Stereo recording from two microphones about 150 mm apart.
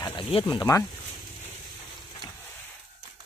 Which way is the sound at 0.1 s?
35° left (ahead or behind).